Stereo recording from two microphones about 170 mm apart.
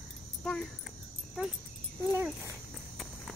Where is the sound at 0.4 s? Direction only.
5° left (ahead or behind).